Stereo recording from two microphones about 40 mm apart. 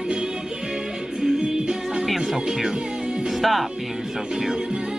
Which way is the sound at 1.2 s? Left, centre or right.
Centre.